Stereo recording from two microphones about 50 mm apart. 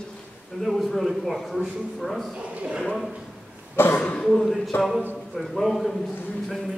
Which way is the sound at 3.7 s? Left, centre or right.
Left.